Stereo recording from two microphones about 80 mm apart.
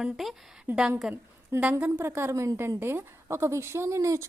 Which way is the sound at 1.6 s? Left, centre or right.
Centre.